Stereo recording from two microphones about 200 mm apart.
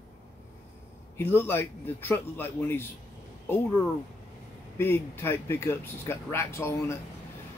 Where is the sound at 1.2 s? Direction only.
10° left (ahead or behind).